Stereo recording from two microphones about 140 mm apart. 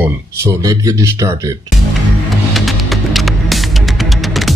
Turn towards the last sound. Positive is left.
turn(degrees=0)  # may be behind; listen again after turning